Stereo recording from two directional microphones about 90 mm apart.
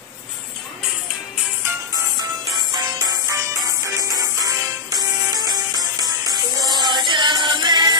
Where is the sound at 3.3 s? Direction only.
40° right (ahead or behind).